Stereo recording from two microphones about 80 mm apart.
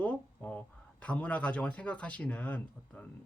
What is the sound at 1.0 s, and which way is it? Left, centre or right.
Speech, centre.